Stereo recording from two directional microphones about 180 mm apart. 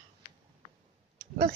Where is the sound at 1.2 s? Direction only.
50° right (ahead or behind).